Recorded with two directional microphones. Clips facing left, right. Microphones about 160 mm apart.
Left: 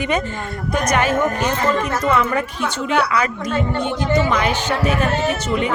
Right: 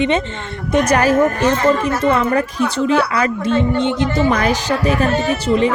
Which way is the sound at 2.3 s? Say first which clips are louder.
Right 5 dB; 35° right (ahead or behind).